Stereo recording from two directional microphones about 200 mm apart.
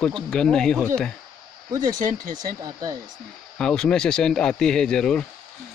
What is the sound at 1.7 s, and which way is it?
Speech, 20° right (ahead or behind).